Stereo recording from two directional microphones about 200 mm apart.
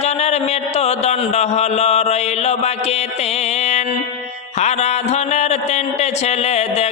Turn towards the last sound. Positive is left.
turn(degrees=35)  # may be behind; listen again after turning